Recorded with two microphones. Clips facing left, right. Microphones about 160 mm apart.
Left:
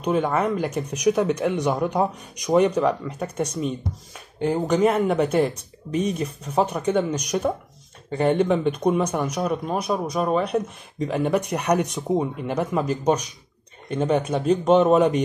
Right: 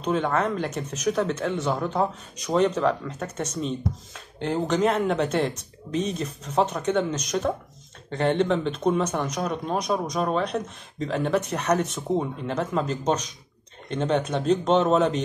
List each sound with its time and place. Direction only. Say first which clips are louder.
0.0 s speech: left 2 dB; 10° left (ahead or behind)